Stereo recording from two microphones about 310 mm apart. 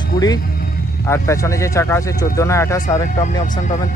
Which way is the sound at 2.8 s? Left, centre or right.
Left.